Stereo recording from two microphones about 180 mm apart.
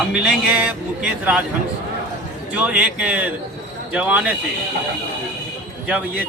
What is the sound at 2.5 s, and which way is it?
A man's voice, 5° right (ahead or behind).